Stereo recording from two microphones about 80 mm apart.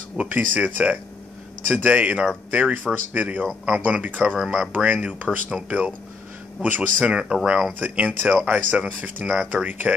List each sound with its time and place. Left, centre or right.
0.2 s speech: centre
1.8 s speech: centre
7.8 s speech: centre